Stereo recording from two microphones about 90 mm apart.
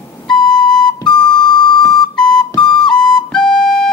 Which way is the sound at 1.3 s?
55° left (ahead or behind).